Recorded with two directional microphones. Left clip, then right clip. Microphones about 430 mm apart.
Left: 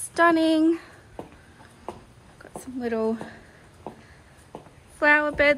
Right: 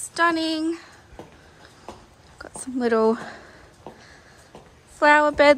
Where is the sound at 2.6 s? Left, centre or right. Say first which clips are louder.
Right 7 dB; centre.